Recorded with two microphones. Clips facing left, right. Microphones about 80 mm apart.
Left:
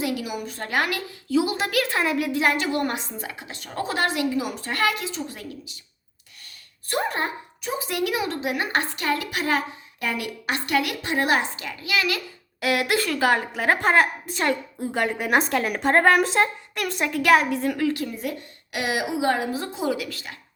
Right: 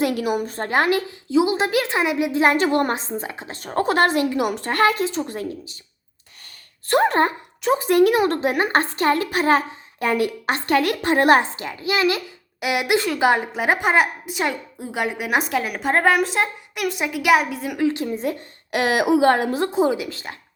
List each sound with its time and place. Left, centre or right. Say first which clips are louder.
0.0 s a woman's voice: right 6 dB; right
2.6 s a woman's voice: right 5 dB; right
4.3 s a woman's voice: right 4 dB; right
5.1 s a woman's voice: right 6 dB; right
6.8 s speech: right 8 dB; right
11.5 s a woman's voice: right 3 dB; right; by 17.7 s centre
17.7 s a woman's voice: right 3 dB; right
18.7 s a woman's voice: right 8 dB; right
19.7 s a woman's voice: right 6 dB; right